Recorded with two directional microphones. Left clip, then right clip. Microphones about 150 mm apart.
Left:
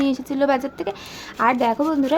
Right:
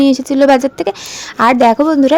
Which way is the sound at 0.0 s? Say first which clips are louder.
Right 10 dB; 50° right (ahead or behind).